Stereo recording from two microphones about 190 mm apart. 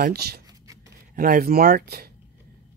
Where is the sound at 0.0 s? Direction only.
55° right (ahead or behind).